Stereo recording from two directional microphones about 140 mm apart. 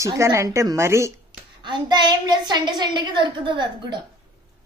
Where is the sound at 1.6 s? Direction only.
35° right (ahead or behind).